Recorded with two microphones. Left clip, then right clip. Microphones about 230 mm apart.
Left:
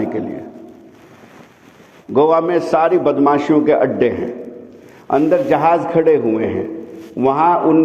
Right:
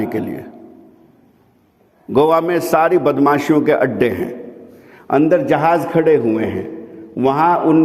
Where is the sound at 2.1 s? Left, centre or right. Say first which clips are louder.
Even; right.